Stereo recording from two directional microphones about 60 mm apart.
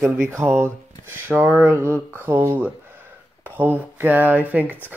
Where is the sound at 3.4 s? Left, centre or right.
Right.